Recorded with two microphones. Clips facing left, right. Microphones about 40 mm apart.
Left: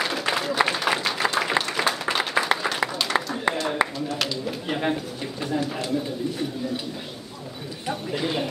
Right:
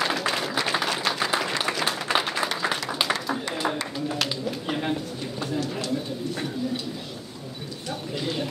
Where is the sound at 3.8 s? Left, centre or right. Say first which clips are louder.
Left 9 dB; left.